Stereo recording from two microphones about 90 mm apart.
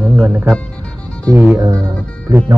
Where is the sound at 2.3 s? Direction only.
25° right (ahead or behind).